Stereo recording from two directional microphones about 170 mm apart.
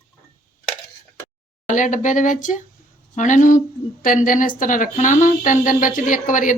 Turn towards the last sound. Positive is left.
turn(degrees=50)  # may be behind; listen again after turning